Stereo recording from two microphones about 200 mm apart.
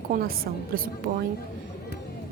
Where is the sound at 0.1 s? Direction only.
45° right (ahead or behind).